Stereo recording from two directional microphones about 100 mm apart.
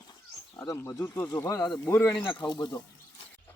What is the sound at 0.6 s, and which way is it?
Speech, 35° left (ahead or behind).